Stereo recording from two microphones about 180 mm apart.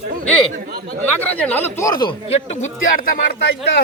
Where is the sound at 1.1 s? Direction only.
10° left (ahead or behind); by 2.7 s 35° left (ahead or behind).